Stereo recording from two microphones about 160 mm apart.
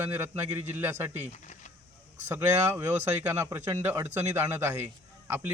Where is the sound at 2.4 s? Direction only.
10° right (ahead or behind).